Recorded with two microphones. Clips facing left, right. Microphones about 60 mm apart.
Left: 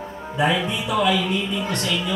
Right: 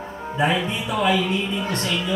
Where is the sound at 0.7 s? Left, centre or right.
Right.